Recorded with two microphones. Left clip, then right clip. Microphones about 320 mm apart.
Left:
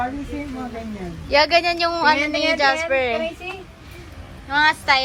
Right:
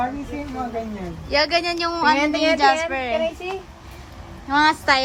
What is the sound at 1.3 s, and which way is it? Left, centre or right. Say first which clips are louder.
Speech: left 4 dB; centre.